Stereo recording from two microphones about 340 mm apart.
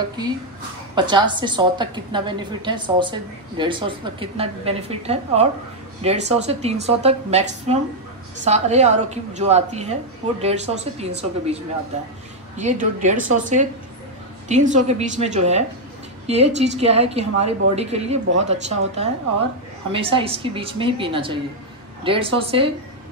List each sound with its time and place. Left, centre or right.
0.9 s a woman's voice: centre